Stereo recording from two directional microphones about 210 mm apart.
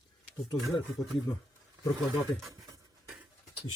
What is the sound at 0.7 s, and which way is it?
Speech, 15° left (ahead or behind).